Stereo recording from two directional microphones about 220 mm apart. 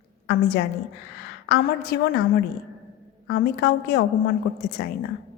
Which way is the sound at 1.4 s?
45° left (ahead or behind).